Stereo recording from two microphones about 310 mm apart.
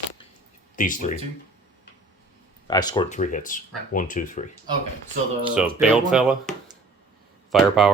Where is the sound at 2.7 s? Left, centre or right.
Centre.